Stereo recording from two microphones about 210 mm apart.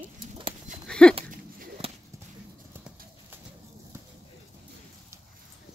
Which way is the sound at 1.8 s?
25° right (ahead or behind).